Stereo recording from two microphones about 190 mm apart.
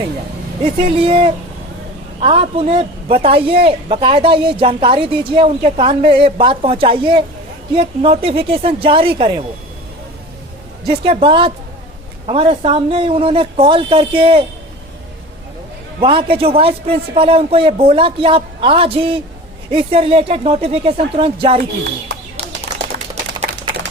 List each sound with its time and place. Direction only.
0.6 s speech: 25° right (ahead or behind)
10.8 s speech: 30° right (ahead or behind)
16.0 s speech: 25° right (ahead or behind)
21.6 s speech: 55° right (ahead or behind)
23.5 s a sound: 50° right (ahead or behind)